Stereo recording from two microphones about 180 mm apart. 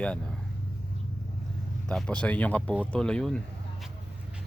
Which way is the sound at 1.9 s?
5° left (ahead or behind).